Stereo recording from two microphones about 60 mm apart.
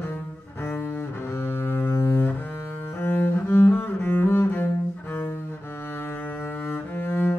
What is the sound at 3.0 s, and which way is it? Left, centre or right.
Cello, left.